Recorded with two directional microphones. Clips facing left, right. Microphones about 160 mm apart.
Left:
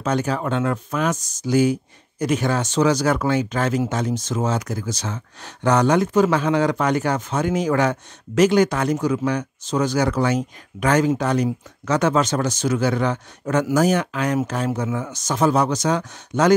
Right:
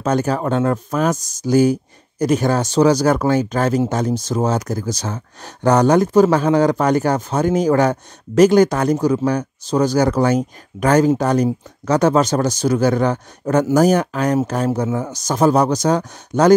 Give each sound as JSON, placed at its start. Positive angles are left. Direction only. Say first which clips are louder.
{"t": 0.0, "sound": "speech", "louder": "right 4 dB", "side_deg": -40}